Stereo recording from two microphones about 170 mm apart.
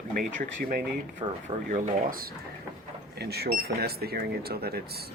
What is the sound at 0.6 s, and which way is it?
Speech, 55° right (ahead or behind).